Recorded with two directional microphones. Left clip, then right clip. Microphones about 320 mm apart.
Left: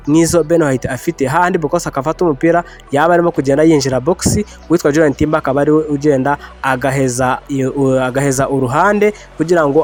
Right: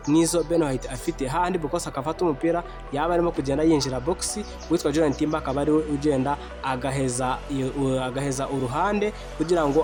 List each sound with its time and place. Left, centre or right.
0.1 s speech: left